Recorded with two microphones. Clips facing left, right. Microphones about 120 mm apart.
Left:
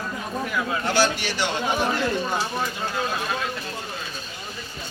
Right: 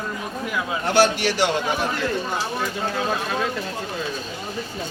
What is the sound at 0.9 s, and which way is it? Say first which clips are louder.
Speech: right 6 dB; 70° right (ahead or behind).